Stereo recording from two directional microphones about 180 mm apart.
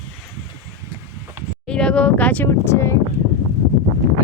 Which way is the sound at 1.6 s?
5° left (ahead or behind).